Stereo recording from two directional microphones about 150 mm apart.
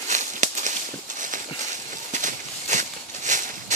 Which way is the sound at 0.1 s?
55° right (ahead or behind).